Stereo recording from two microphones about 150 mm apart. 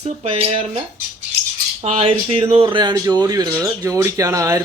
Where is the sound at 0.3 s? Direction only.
40° right (ahead or behind).